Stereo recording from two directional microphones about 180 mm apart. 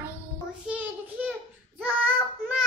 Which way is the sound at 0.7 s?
10° right (ahead or behind).